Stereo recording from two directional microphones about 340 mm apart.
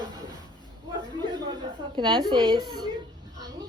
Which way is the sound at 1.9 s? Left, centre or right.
Centre.